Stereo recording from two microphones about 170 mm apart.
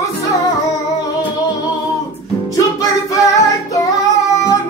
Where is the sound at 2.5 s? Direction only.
20° left (ahead or behind).